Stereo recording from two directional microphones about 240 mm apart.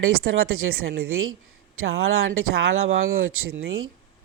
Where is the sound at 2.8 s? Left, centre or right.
Right.